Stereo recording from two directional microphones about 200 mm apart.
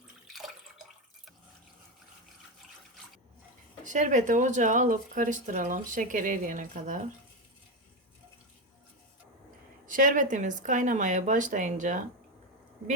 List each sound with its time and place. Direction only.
0.3 s drip: centre (ahead or behind)
3.8 s speech: 40° right (ahead or behind)
9.8 s speech: 40° right (ahead or behind)